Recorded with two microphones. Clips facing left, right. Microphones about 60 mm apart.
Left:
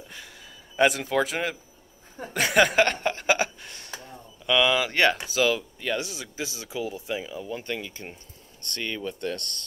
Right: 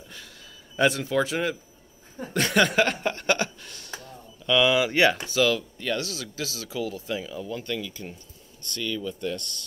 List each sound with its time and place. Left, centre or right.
0.7 s speech: centre
2.3 s a sound: centre
3.6 s a sound: left
4.5 s speech: centre
4.7 s speech: centre
5.1 s speech: centre; by 9.7 s left